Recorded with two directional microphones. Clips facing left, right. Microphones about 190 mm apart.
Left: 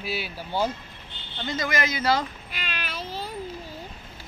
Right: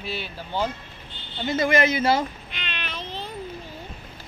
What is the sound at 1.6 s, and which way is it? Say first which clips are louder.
Speech: right 7 dB; 25° right (ahead or behind).